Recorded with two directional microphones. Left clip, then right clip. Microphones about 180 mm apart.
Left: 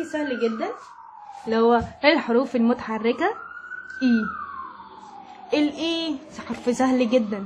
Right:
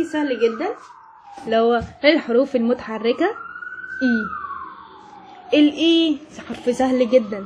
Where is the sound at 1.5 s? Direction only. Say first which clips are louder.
Right 2 dB; 15° left (ahead or behind).